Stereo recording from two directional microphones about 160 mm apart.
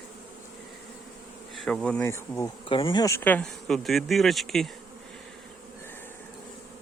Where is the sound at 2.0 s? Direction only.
15° left (ahead or behind).